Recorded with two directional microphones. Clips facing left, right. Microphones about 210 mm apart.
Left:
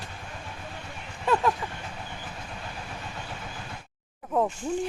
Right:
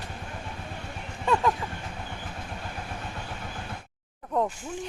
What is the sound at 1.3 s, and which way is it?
Speech, 5° left (ahead or behind).